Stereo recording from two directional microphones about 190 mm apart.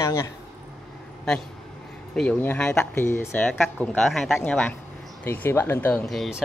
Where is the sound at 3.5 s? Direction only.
Centre (ahead or behind).